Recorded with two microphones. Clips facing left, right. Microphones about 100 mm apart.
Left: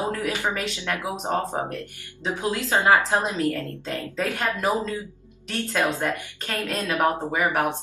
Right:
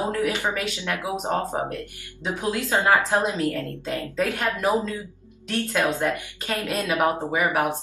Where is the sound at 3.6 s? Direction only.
15° right (ahead or behind).